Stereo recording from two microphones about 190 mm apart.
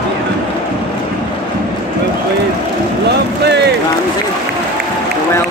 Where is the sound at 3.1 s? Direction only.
60° right (ahead or behind).